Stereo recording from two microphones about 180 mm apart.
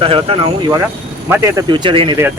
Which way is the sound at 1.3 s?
15° right (ahead or behind).